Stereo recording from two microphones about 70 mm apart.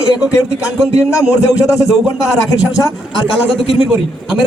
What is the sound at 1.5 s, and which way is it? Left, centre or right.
Speech, left.